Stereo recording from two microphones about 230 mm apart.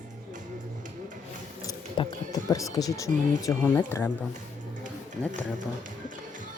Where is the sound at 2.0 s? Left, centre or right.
Centre.